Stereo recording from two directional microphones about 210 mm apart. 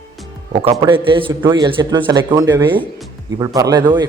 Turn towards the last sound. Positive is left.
turn(degrees=-20)  # may be behind; listen again after turning